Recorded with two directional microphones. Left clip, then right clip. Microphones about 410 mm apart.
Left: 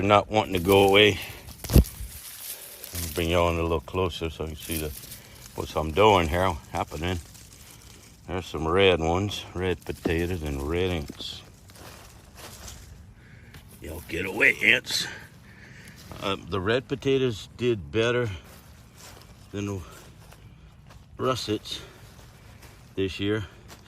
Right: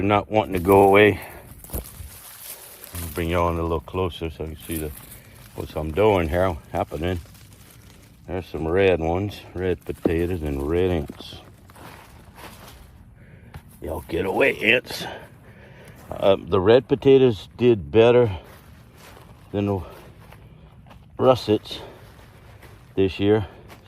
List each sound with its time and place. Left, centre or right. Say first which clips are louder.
0.0 s speech: right 1 dB; centre
2.9 s speech: even; centre
8.3 s speech: right 2 dB; centre
11.8 s a sound: right 3 dB; centre
14.1 s speech: right 2 dB; centre
19.5 s speech: right 9 dB; centre
21.2 s speech: right 9 dB; centre
23.0 s speech: right 8 dB; centre